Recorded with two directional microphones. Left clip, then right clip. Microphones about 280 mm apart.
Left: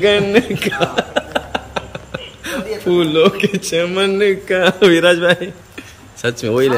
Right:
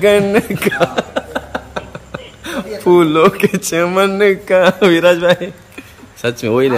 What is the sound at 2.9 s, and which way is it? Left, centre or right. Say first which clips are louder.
A man's voice: right 3 dB; centre.